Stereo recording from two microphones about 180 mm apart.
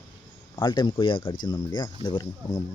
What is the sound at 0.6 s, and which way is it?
Speech, 25° left (ahead or behind).